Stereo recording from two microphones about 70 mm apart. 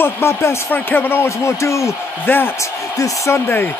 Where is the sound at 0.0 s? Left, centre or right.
Left.